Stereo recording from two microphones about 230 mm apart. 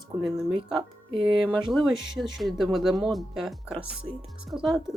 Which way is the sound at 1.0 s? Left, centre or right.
Right.